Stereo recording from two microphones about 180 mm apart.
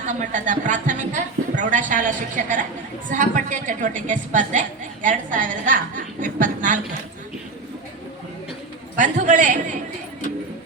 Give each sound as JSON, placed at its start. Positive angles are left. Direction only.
{"t": 0.0, "sound": "a woman's voice", "side_deg": -45}
{"t": 9.0, "sound": "a woman's voice", "side_deg": -45}